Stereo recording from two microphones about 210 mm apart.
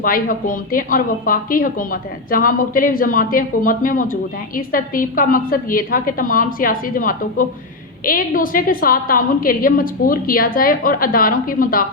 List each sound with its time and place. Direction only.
0.0 s a woman's voice: 40° left (ahead or behind)